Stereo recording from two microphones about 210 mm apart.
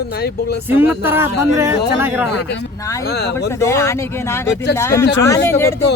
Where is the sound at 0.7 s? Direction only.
10° right (ahead or behind).